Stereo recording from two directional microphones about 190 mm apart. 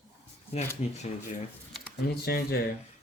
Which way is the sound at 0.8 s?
35° left (ahead or behind).